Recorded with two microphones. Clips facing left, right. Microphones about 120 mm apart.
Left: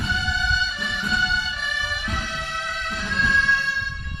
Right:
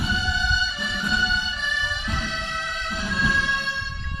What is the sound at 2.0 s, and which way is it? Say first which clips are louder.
Bagpipes: even; centre (ahead or behind).